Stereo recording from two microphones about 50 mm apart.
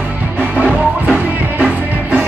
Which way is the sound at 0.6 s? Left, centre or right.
Right.